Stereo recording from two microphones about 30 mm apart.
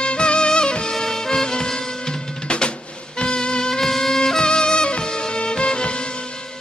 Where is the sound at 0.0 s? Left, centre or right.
Left.